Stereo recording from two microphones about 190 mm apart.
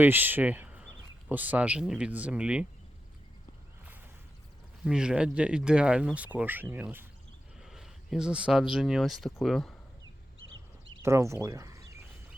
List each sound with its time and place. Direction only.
0.0 s speech: 10° right (ahead or behind)
4.8 s speech: 5° right (ahead or behind)
10.4 s a sound: 90° right
11.0 s speech: 15° right (ahead or behind)